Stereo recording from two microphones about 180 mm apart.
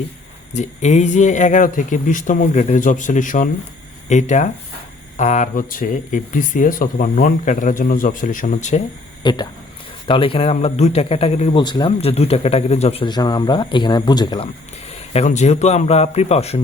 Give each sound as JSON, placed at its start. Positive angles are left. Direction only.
{"t": 0.5, "sound": "speech", "side_deg": 40}
{"t": 9.2, "sound": "speech", "side_deg": 25}